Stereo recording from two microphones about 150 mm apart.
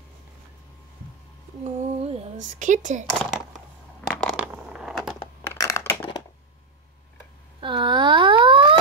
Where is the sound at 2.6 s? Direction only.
55° right (ahead or behind).